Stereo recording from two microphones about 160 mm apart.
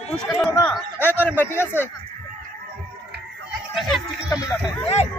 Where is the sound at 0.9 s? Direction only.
15° left (ahead or behind).